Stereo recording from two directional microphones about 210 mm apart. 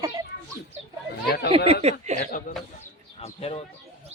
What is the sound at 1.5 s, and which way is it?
Speech, 25° right (ahead or behind).